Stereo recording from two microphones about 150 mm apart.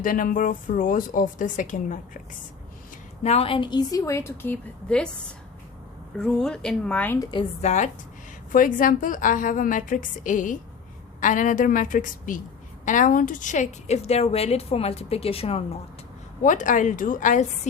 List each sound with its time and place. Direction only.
0.0 s speech: 65° left (ahead or behind)
3.2 s a woman's voice: 40° left (ahead or behind); by 5.1 s 5° left (ahead or behind)
6.1 s speech: 5° left (ahead or behind)
7.2 s a woman's voice: 30° left (ahead or behind)
7.6 s a woman's voice: 50° left (ahead or behind)
8.5 s a woman's voice: 65° left (ahead or behind); by 15.6 s 40° left (ahead or behind)
16.4 s speech: 60° left (ahead or behind)